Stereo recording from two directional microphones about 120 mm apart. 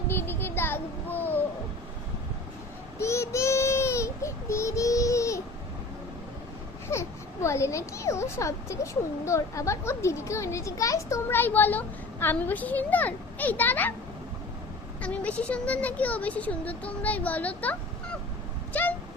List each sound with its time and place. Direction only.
0.1 s child singing: 20° left (ahead or behind)
3.0 s child singing: 25° left (ahead or behind)
6.9 s a sound: 20° left (ahead or behind)
7.4 s speech: 25° left (ahead or behind)
15.0 s speech: 10° left (ahead or behind)
18.7 s a sound: 15° left (ahead or behind)